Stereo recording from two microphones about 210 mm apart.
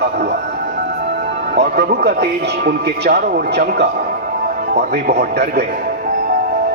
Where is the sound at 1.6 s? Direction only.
50° right (ahead or behind).